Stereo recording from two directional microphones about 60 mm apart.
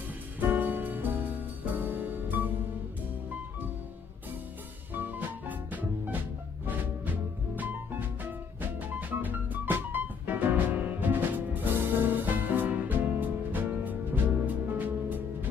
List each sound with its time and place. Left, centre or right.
0.4 s music: right
4.9 s music: right